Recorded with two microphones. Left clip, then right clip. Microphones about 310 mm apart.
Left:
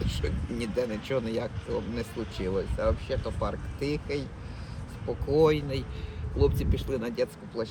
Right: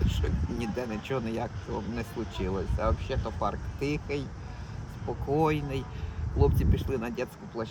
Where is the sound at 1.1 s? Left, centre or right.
Centre.